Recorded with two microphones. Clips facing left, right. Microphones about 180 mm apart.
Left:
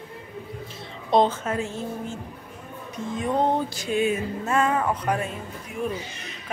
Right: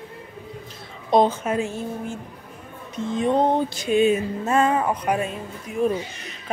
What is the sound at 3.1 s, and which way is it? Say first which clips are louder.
Music: right 3 dB; 25° right (ahead or behind).